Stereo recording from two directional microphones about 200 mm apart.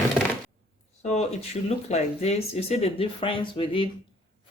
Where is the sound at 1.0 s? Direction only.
35° left (ahead or behind).